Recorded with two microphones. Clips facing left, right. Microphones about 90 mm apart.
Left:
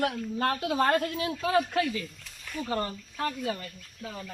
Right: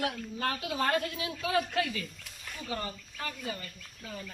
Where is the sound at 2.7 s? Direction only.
55° left (ahead or behind).